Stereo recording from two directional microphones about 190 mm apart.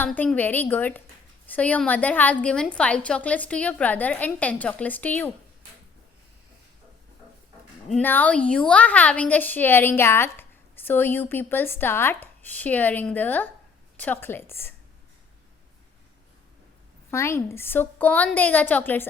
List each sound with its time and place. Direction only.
0.0 s a woman's voice: 10° left (ahead or behind)
7.9 s a woman's voice: 5° left (ahead or behind)
17.1 s a woman's voice: 15° left (ahead or behind)